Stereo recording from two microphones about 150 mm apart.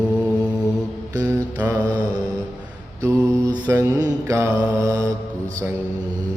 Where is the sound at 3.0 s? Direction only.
25° right (ahead or behind).